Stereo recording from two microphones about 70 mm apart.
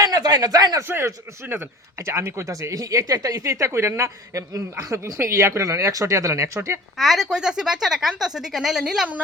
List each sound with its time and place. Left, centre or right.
0.0 s speech: right
0.8 s speech: right
4.5 s speech: right
6.9 s speech: centre